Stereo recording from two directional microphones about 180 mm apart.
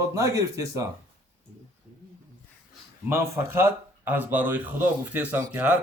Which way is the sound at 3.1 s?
15° right (ahead or behind).